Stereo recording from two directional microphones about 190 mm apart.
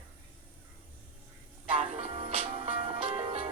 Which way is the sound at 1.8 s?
35° right (ahead or behind).